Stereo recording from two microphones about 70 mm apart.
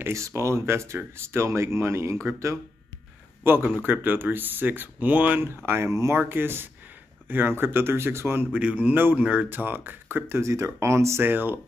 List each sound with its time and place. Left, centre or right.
0.1 s speech: right
3.4 s speech: right
5.9 s speech: right
6.1 s speech: right
8.5 s speech: centre; by 11.2 s right
11.2 s speech: right